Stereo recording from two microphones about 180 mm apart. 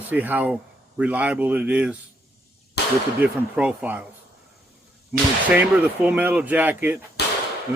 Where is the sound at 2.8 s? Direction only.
65° left (ahead or behind).